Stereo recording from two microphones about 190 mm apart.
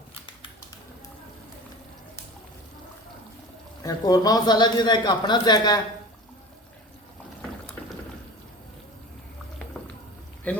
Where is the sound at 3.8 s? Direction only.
20° left (ahead or behind).